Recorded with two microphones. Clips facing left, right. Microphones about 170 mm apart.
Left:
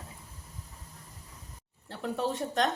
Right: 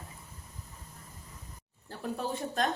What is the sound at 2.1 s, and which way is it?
Speech, 75° left (ahead or behind).